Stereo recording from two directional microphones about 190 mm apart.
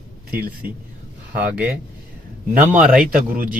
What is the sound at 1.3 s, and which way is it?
Speech, 10° right (ahead or behind).